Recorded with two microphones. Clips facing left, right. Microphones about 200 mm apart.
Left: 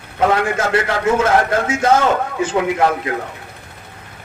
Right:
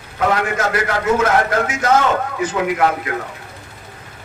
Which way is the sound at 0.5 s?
25° left (ahead or behind).